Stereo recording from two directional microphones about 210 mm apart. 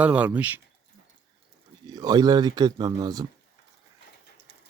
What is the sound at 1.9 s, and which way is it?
Speech, 15° right (ahead or behind).